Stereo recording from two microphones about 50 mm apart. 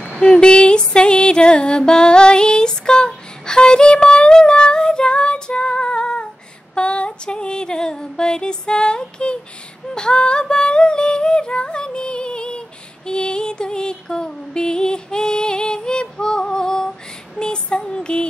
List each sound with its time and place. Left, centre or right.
0.2 s music: centre
9.9 s a sound: centre
17.4 s music: centre